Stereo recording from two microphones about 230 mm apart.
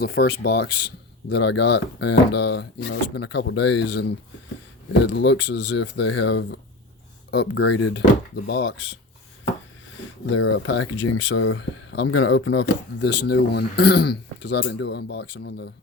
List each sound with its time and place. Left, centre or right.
0.0 s speech: left
5.0 s speech: left
10.2 s speech: left